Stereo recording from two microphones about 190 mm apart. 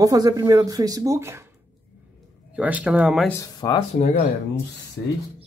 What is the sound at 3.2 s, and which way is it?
Speech, 15° left (ahead or behind).